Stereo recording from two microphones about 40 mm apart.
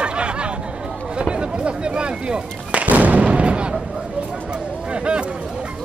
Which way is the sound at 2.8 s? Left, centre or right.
Right.